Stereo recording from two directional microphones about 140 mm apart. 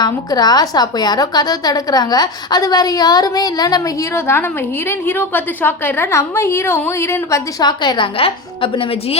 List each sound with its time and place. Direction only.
0.0 s a woman's voice: 30° left (ahead or behind)